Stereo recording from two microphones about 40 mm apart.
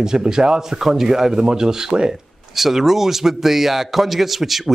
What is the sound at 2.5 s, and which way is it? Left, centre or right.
A man's voice, centre.